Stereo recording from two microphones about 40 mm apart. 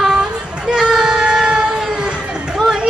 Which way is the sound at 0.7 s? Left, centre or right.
Centre.